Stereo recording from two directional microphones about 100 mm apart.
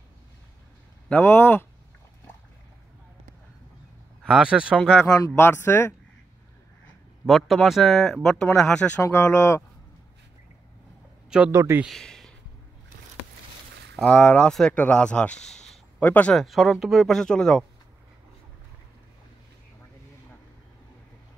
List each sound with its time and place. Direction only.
1.0 s speech: 15° left (ahead or behind)
4.3 s speech: 10° right (ahead or behind)
5.4 s speech: 20° left (ahead or behind)
7.2 s speech: centre (ahead or behind)
9.0 s speech: 25° left (ahead or behind)
11.2 s speech: 10° right (ahead or behind)
11.5 s speech: 25° right (ahead or behind)
11.9 s speech: 5° left (ahead or behind)
14.0 s speech: 15° left (ahead or behind)
16.3 s speech: centre (ahead or behind)